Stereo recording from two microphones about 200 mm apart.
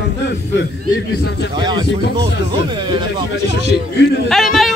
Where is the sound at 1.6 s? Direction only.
20° right (ahead or behind).